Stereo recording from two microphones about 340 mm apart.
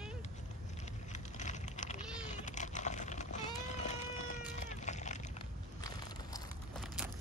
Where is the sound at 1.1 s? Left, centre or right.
Left.